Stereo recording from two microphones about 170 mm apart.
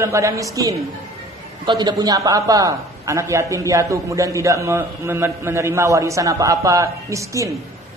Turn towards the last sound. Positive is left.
turn(degrees=-20)  # may be behind; listen again after turning